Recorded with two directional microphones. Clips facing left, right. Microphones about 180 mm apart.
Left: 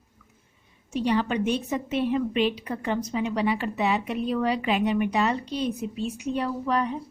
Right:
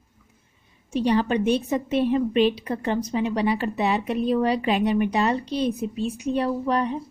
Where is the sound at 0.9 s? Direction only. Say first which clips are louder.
Right 3 dB; 35° right (ahead or behind).